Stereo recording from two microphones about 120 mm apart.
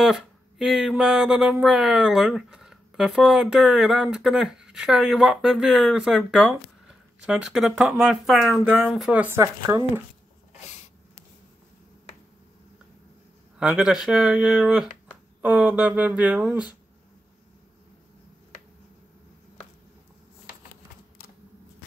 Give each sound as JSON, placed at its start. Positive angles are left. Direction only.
{"t": 0.0, "sound": "speech", "side_deg": -5}
{"t": 8.6, "sound": "speech", "side_deg": -15}
{"t": 9.4, "sound": "speech", "side_deg": -25}
{"t": 13.6, "sound": "speech", "side_deg": -10}